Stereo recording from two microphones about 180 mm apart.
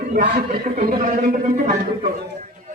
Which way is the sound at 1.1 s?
45° right (ahead or behind).